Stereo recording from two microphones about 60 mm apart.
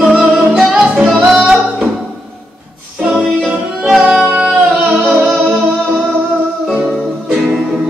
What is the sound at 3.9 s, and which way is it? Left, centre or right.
Music, centre.